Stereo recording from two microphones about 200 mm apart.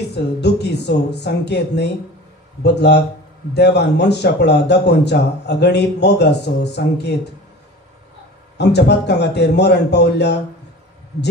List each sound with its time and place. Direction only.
0.1 s a man's voice: 55° left (ahead or behind)
8.5 s a man's voice: 55° left (ahead or behind)